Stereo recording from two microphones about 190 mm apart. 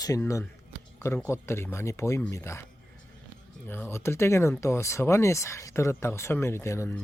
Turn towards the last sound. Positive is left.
turn(degrees=15)  # may be behind; listen again after turning